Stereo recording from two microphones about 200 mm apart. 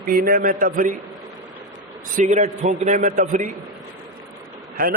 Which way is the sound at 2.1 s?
40° right (ahead or behind).